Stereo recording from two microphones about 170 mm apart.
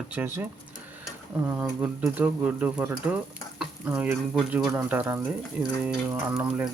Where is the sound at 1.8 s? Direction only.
10° right (ahead or behind).